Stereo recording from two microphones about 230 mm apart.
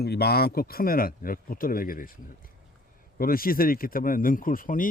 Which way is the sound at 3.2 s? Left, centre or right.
Left.